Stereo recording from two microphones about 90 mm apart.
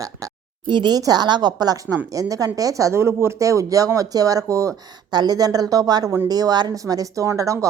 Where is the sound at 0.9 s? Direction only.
45° right (ahead or behind).